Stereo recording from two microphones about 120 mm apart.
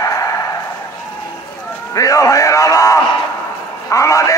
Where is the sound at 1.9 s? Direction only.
30° left (ahead or behind).